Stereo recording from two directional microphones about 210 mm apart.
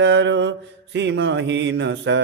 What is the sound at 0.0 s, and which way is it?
Mantra, 60° right (ahead or behind).